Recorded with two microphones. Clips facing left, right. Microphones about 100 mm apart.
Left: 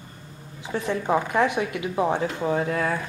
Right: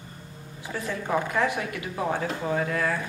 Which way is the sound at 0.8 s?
20° left (ahead or behind).